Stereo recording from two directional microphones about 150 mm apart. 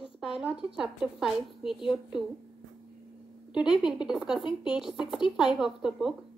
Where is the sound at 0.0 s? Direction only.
5° right (ahead or behind).